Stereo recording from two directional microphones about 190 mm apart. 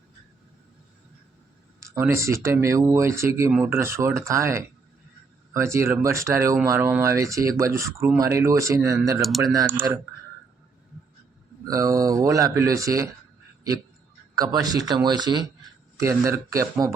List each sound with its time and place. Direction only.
1.8 s speech: 15° right (ahead or behind)
11.6 s speech: 20° right (ahead or behind)
14.3 s speech: 20° right (ahead or behind)